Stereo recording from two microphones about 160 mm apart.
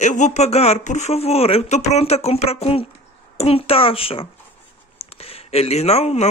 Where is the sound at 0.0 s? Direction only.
50° left (ahead or behind).